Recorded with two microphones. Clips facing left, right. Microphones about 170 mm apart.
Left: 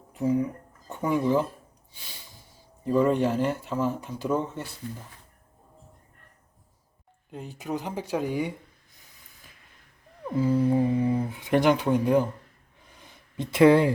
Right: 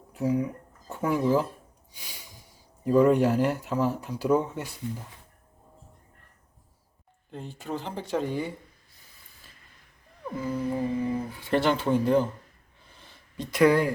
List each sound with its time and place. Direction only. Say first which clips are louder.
0.1 s speech: left 1 dB; 5° right (ahead or behind)
2.8 s speech: right 2 dB; 5° right (ahead or behind)
7.3 s speech: left 2 dB; 5° left (ahead or behind)
10.3 s humming: left 7 dB; 30° left (ahead or behind)
10.8 s speech: left 4 dB; 15° left (ahead or behind)
13.0 s a sound: left 3 dB; 20° left (ahead or behind)